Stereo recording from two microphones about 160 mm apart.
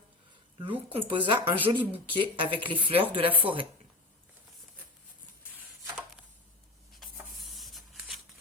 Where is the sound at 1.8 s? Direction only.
10° left (ahead or behind).